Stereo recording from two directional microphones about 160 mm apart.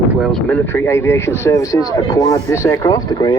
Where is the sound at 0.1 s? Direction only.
Centre (ahead or behind).